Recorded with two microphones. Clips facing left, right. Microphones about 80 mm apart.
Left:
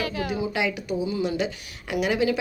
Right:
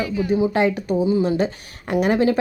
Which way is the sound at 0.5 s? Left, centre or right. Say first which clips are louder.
Right 7 dB; right.